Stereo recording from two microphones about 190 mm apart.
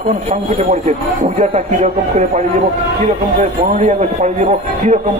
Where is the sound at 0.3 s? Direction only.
40° right (ahead or behind).